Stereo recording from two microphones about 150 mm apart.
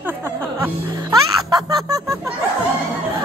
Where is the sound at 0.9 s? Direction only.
25° right (ahead or behind).